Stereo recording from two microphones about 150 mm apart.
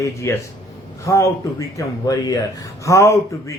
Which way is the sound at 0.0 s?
20° left (ahead or behind).